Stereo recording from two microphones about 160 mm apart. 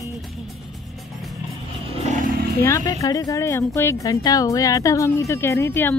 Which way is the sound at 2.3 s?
70° right (ahead or behind).